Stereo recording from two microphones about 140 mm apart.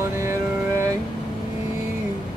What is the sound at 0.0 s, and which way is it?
Music, 20° right (ahead or behind).